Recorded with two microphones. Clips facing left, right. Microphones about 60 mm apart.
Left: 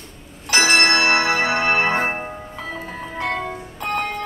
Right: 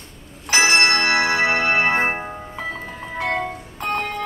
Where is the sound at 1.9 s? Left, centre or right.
Centre.